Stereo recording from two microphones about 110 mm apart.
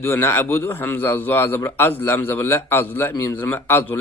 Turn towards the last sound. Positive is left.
turn(degrees=20)  # may be behind; listen again after turning